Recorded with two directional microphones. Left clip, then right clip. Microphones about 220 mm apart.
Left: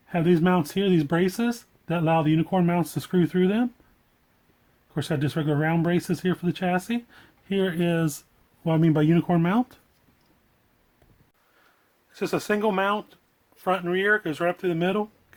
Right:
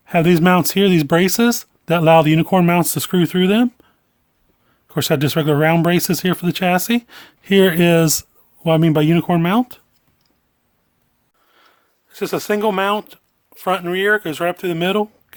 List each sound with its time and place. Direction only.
0.0 s speech: 50° right (ahead or behind)
4.9 s speech: 45° right (ahead or behind); by 9.8 s 30° right (ahead or behind)
12.1 s speech: 25° right (ahead or behind)